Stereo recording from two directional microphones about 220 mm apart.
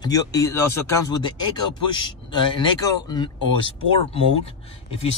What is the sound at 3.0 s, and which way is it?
Speech, 20° left (ahead or behind).